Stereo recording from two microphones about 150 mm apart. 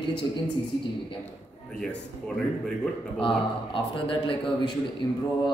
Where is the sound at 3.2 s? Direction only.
35° left (ahead or behind).